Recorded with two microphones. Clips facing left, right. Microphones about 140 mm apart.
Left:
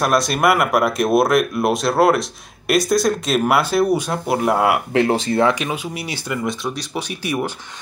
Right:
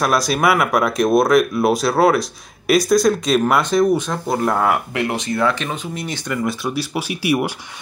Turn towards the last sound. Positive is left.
turn(degrees=-10)  # may be behind; listen again after turning